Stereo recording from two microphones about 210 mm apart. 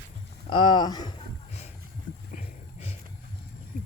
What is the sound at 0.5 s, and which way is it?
Speech, 20° left (ahead or behind).